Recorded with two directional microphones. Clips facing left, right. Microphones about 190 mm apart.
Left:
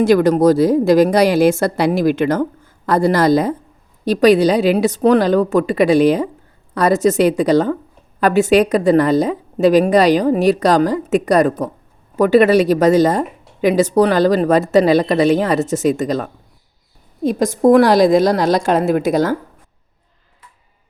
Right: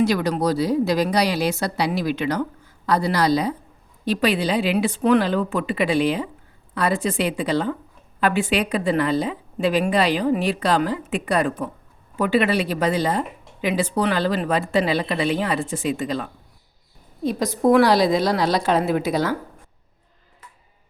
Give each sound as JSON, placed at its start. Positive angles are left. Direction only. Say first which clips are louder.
{"t": 0.0, "sound": "speech", "louder": "left 9 dB", "side_deg": 50}